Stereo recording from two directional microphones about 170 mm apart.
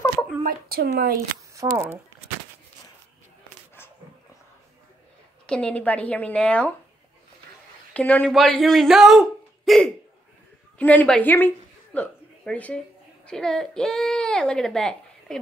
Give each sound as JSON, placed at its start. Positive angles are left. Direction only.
{"t": 0.4, "sound": "speech", "side_deg": -60}
{"t": 1.5, "sound": "speech", "side_deg": -20}
{"t": 5.5, "sound": "a woman's voice", "side_deg": 5}
{"t": 7.9, "sound": "a woman's voice", "side_deg": 10}